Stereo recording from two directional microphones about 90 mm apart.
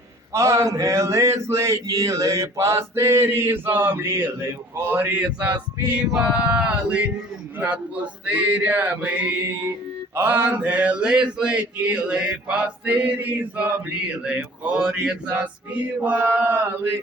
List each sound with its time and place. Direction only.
0.3 s speech: 35° right (ahead or behind); by 7.1 s 15° right (ahead or behind)
7.6 s a sound: 15° right (ahead or behind)
15.4 s speech: 15° right (ahead or behind)